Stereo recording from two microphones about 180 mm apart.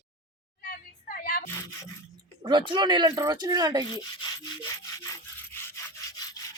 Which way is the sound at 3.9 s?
20° left (ahead or behind).